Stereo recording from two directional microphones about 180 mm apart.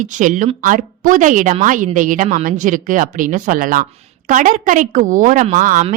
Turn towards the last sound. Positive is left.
turn(degrees=-45)  # may be behind; listen again after turning